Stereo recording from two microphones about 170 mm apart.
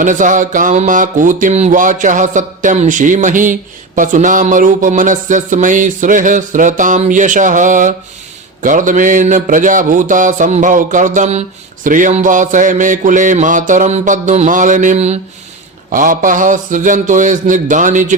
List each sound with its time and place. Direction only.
0.0 s music: 50° right (ahead or behind)
15.9 s music: 50° right (ahead or behind)